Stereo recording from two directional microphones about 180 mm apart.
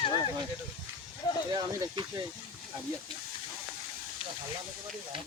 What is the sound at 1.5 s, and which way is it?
Speech, 25° right (ahead or behind).